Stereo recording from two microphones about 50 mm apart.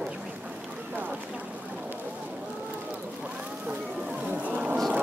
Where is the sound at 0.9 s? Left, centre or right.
Right.